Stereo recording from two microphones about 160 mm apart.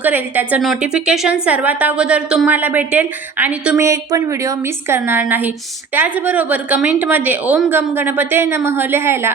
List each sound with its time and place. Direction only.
0.0 s a woman's voice: 10° right (ahead or behind)
3.8 s a woman's voice: 20° right (ahead or behind)